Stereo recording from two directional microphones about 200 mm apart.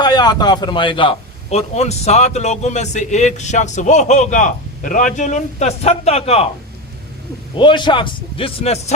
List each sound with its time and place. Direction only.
0.0 s a man's voice: 20° left (ahead or behind)
7.5 s a man's voice: 25° left (ahead or behind)